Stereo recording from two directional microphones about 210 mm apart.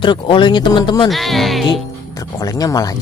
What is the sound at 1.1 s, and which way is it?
Music, centre (ahead or behind).